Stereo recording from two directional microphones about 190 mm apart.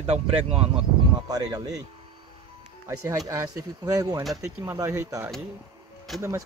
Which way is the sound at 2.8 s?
15° right (ahead or behind).